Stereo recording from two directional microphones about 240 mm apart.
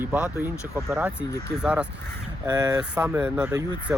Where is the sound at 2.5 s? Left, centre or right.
Centre.